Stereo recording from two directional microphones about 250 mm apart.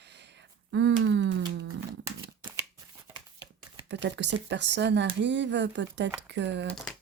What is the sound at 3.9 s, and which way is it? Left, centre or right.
Speech, right.